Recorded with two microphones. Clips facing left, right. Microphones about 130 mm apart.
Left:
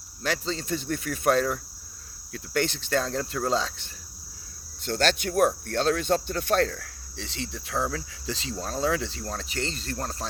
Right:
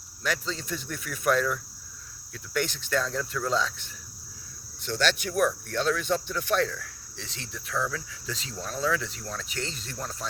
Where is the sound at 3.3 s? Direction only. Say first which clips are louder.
Left 3 dB; 45° left (ahead or behind).